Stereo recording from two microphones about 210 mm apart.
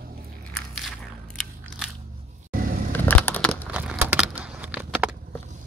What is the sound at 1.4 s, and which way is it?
Biting, centre (ahead or behind).